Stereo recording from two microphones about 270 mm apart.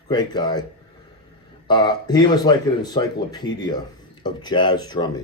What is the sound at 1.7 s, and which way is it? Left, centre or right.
Speech, centre.